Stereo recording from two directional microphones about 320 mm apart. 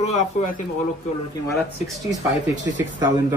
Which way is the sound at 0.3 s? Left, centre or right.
Left.